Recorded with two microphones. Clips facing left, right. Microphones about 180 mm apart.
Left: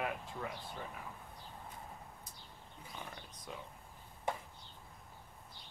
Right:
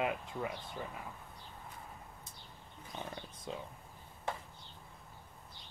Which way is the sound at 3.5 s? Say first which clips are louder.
Right 5 dB; 25° right (ahead or behind).